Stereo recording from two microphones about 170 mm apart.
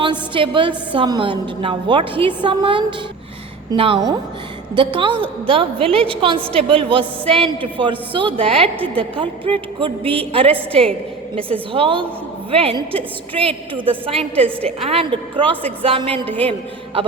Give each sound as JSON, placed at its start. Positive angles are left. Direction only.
{"t": 0.0, "sound": "a woman's voice", "side_deg": -30}
{"t": 11.7, "sound": "a woman's voice", "side_deg": -30}
{"t": 13.7, "sound": "a woman's voice", "side_deg": -10}
{"t": 14.1, "sound": "a woman's voice", "side_deg": -35}